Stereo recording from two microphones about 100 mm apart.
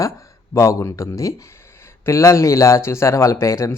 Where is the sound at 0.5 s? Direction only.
30° left (ahead or behind).